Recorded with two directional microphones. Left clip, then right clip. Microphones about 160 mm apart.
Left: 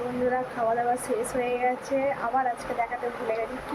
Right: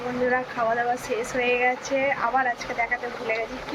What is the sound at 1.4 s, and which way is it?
A woman's voice, 10° left (ahead or behind).